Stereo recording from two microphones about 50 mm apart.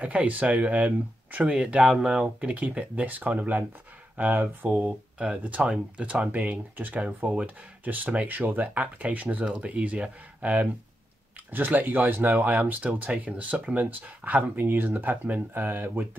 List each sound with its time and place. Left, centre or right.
0.0 s speech: right
1.5 s speech: right
4.8 s speech: right